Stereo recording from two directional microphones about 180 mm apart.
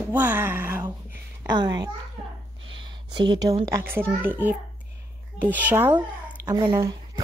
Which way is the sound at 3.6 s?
15° right (ahead or behind).